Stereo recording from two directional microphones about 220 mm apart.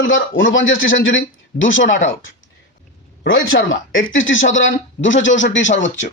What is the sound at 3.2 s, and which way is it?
A man's voice, 60° left (ahead or behind).